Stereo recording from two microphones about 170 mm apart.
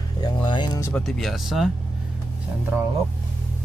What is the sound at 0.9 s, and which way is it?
Speech, 5° left (ahead or behind).